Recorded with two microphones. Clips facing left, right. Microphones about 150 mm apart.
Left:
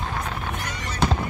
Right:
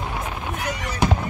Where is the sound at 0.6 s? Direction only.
10° right (ahead or behind).